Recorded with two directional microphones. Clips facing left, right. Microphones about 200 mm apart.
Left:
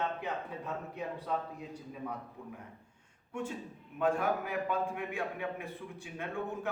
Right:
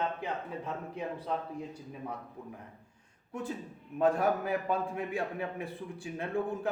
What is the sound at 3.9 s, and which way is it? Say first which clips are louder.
A man's voice: right 3 dB; 35° right (ahead or behind).